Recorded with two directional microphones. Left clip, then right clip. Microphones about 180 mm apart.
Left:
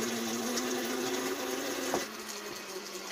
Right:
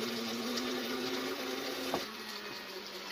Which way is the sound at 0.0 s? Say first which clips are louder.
Left 3 dB; 55° left (ahead or behind).